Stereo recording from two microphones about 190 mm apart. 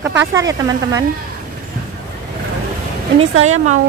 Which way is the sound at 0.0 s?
15° right (ahead or behind).